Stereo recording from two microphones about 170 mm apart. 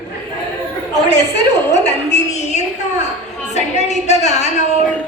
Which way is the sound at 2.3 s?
40° left (ahead or behind).